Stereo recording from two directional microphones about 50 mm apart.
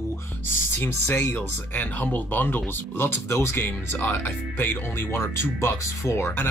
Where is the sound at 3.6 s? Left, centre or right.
Left.